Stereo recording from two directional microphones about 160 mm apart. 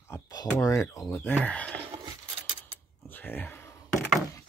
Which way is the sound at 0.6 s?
20° left (ahead or behind).